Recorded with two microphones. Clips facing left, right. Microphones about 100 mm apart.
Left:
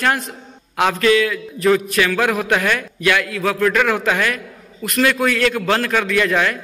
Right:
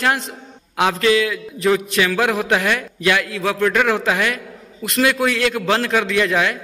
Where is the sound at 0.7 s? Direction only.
20° right (ahead or behind).